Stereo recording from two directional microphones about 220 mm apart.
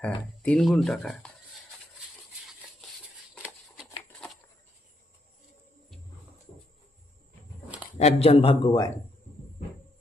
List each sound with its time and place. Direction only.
0.0 s speech: 5° left (ahead or behind)
3.3 s a sound: 5° right (ahead or behind)
7.9 s speech: 30° left (ahead or behind)